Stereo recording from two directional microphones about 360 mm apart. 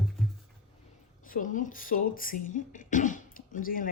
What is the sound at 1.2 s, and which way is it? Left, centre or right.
Speech, left.